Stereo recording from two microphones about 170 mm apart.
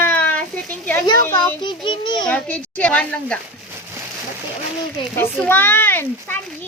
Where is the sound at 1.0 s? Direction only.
25° left (ahead or behind).